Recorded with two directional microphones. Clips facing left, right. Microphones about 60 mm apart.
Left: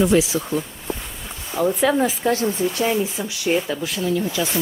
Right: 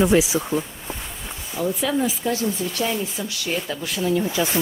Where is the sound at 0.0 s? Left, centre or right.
Right.